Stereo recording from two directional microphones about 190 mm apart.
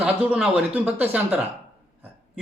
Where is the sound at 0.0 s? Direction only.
5° right (ahead or behind).